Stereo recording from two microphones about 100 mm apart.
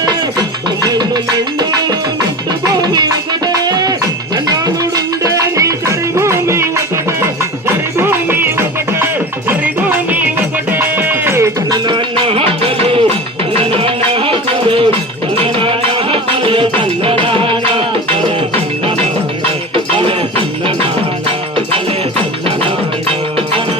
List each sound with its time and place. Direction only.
0.0 s music: 40° right (ahead or behind)
7.9 s music: 20° right (ahead or behind)
11.7 s music: 55° right (ahead or behind)
19.7 s music: 60° right (ahead or behind)